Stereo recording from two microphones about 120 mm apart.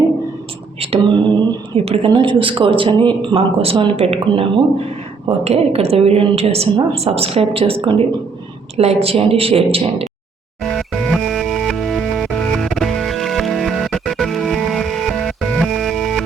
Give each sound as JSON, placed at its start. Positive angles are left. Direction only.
{"t": 0.8, "sound": "a sound", "side_deg": -45}
{"t": 1.7, "sound": "a woman's voice", "side_deg": -55}
{"t": 2.0, "sound": "speech", "side_deg": -45}
{"t": 5.4, "sound": "a woman's voice", "side_deg": -60}
{"t": 10.6, "sound": "music", "side_deg": 5}